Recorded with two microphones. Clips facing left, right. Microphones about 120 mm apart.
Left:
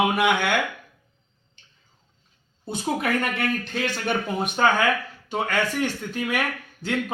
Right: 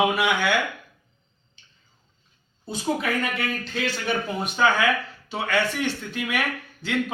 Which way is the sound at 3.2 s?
55° left (ahead or behind).